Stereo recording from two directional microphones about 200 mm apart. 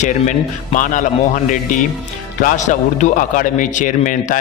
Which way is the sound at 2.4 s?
40° left (ahead or behind).